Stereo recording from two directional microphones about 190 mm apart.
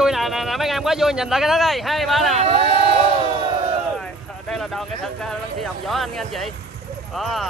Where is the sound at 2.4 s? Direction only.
30° right (ahead or behind).